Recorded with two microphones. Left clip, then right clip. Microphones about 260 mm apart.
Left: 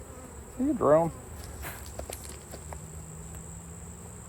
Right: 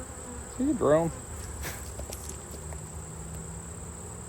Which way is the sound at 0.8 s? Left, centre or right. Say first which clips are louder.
Left 2 dB; centre.